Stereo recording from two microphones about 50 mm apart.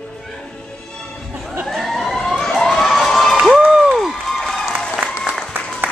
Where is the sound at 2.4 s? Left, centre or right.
Centre.